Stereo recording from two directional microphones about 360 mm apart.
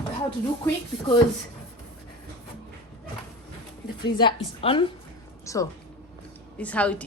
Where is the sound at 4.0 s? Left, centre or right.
Centre.